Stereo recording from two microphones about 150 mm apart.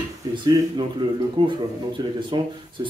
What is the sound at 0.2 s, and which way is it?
Speech, 25° right (ahead or behind).